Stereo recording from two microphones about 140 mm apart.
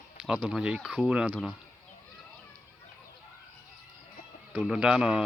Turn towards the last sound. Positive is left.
turn(degrees=-5)  # may be behind; listen again after turning